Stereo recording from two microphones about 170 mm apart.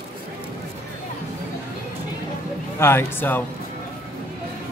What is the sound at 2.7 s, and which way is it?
Speech, 15° left (ahead or behind).